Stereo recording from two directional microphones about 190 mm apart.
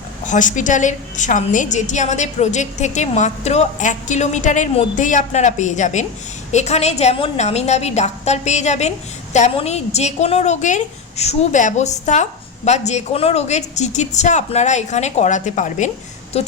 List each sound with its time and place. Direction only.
0.3 s a woman's voice: 40° left (ahead or behind)